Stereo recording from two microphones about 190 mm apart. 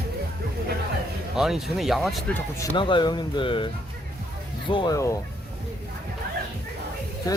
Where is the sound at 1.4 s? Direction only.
Centre (ahead or behind).